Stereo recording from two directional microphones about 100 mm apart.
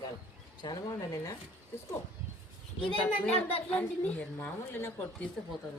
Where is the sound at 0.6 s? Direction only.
40° left (ahead or behind).